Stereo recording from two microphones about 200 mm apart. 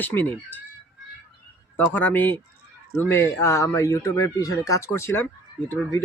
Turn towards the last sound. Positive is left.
turn(degrees=15)  # may be behind; listen again after turning